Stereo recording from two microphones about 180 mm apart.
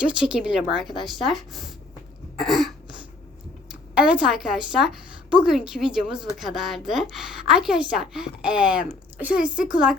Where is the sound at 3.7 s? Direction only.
5° right (ahead or behind).